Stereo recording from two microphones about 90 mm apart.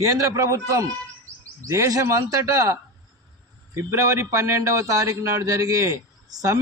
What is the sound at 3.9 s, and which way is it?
A man's voice, 35° right (ahead or behind).